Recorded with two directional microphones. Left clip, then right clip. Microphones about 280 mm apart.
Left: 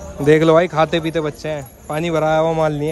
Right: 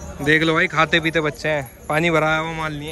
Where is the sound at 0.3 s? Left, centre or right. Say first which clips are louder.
Left 5 dB; left.